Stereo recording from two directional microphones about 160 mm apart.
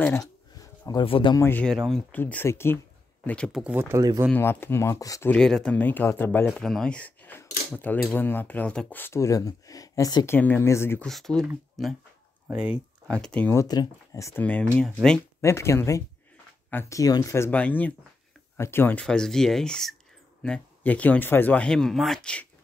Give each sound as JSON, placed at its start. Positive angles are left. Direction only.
{"t": 0.0, "sound": "a sound", "side_deg": 20}
{"t": 1.0, "sound": "speech", "side_deg": 35}
{"t": 1.3, "sound": "speech", "side_deg": 15}
{"t": 3.6, "sound": "speech", "side_deg": -10}
{"t": 4.3, "sound": "speech", "side_deg": 15}
{"t": 5.3, "sound": "speech", "side_deg": 5}
{"t": 11.1, "sound": "speech", "side_deg": 0}
{"t": 13.1, "sound": "speech", "side_deg": 5}
{"t": 14.9, "sound": "speech", "side_deg": -5}
{"t": 15.4, "sound": "speech", "side_deg": 15}